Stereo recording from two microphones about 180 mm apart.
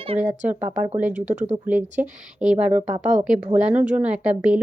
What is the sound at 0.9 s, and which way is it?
Speech, 10° right (ahead or behind).